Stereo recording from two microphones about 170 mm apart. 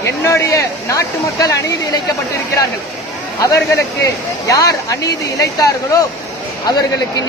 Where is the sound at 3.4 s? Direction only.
20° left (ahead or behind).